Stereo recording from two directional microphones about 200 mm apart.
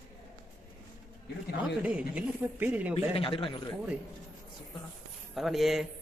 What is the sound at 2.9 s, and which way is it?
Speech, 25° left (ahead or behind).